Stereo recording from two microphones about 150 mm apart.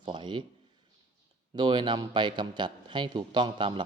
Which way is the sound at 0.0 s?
30° right (ahead or behind).